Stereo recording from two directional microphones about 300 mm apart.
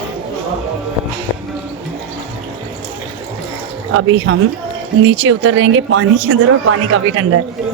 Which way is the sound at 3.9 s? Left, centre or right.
Right.